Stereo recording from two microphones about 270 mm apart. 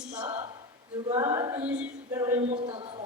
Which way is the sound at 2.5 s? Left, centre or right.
Centre.